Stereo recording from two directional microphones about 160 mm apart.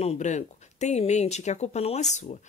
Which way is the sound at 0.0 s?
45° left (ahead or behind).